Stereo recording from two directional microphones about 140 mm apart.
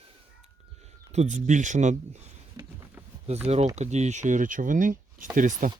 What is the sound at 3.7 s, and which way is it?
Speech, 55° right (ahead or behind).